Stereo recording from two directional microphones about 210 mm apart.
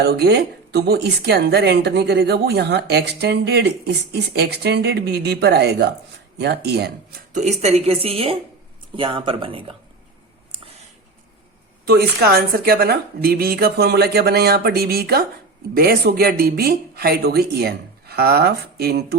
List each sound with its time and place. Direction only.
0.0 s speech: 50° right (ahead or behind)
7.3 s speech: 30° right (ahead or behind)
11.9 s speech: 45° right (ahead or behind)